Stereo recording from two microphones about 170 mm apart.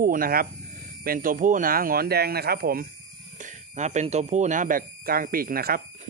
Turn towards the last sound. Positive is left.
turn(degrees=-60)  # may be behind; listen again after turning